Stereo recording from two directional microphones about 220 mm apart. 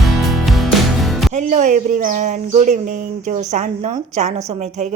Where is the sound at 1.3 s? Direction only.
30° right (ahead or behind).